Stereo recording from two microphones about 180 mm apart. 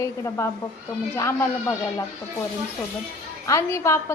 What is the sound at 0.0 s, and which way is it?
Speech, 15° left (ahead or behind).